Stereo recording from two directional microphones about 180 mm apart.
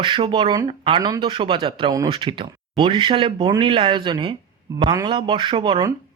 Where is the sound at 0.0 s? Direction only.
25° right (ahead or behind).